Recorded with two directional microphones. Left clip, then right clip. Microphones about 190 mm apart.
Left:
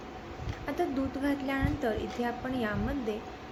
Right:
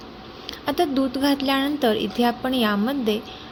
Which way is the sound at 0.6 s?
50° right (ahead or behind).